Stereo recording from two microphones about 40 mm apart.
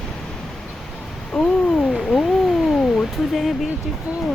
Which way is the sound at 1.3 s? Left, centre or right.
Centre.